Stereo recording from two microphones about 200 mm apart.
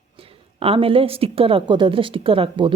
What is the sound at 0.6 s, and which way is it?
Speech, 30° right (ahead or behind).